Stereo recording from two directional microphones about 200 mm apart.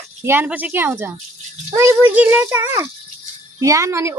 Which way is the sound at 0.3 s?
10° right (ahead or behind).